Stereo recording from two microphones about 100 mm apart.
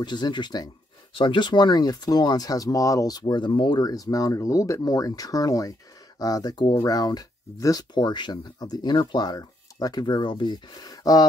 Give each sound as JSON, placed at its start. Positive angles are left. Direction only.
{"t": 0.0, "sound": "speech", "side_deg": 50}